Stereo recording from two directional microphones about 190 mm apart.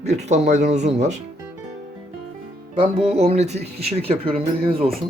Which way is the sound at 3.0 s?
30° right (ahead or behind).